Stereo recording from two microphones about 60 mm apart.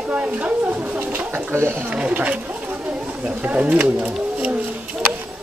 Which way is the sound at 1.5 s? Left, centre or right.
Right.